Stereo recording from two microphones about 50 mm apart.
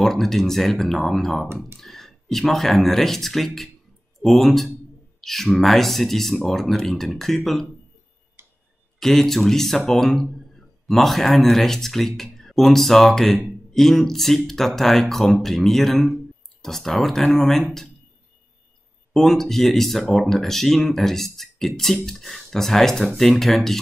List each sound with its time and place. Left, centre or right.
0.0 s speech: centre
8.4 s tick-tock: right
9.0 s speech: centre
19.1 s speech: centre